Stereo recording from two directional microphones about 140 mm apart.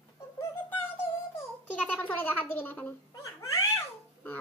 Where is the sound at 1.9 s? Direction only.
15° left (ahead or behind).